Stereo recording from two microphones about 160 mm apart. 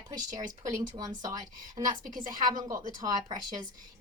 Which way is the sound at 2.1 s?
55° right (ahead or behind).